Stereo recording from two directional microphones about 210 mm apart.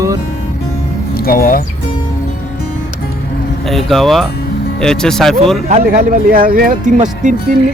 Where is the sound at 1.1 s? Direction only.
45° left (ahead or behind).